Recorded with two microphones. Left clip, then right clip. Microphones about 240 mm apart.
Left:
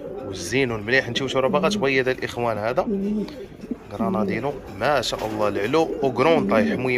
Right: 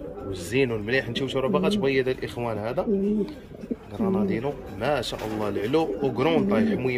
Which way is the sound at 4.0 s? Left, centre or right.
Centre.